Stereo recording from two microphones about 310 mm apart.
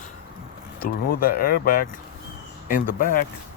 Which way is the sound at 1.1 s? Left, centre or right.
Left.